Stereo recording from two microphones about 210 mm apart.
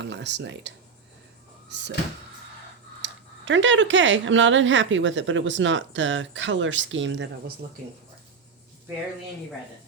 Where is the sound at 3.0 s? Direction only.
60° right (ahead or behind).